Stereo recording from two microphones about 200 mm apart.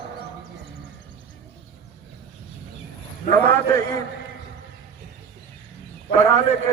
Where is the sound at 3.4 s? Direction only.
10° left (ahead or behind).